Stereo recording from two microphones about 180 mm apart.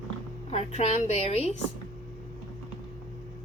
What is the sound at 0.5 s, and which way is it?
Speech, 35° left (ahead or behind).